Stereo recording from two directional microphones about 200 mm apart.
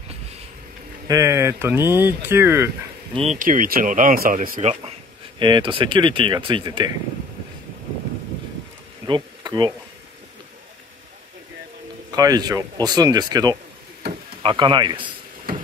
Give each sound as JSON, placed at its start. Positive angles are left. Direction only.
{"t": 1.0, "sound": "speech", "side_deg": -15}
{"t": 3.2, "sound": "speech", "side_deg": -35}
{"t": 5.4, "sound": "speech", "side_deg": -25}
{"t": 9.0, "sound": "insect", "side_deg": -20}
{"t": 12.2, "sound": "speech", "side_deg": -20}